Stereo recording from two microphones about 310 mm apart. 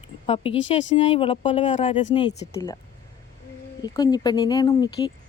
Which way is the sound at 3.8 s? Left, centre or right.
Centre.